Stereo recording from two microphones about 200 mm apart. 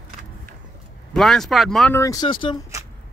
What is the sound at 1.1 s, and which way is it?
Speech, centre (ahead or behind).